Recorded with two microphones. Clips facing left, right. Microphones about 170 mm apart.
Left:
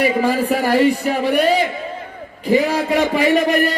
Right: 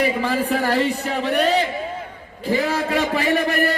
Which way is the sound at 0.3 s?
10° left (ahead or behind).